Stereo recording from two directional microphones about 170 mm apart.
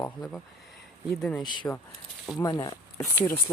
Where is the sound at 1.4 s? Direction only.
25° left (ahead or behind).